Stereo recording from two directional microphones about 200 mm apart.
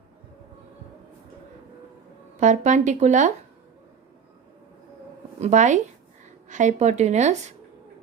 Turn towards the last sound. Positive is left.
turn(degrees=-35)  # may be behind; listen again after turning